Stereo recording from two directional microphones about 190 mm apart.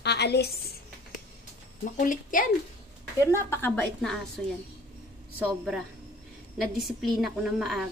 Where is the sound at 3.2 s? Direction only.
15° left (ahead or behind).